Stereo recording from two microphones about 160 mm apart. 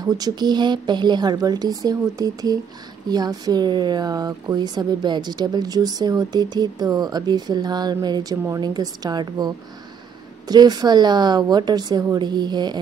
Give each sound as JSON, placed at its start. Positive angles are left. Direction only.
{"t": 0.0, "sound": "speech", "side_deg": -25}
{"t": 10.5, "sound": "speech", "side_deg": -25}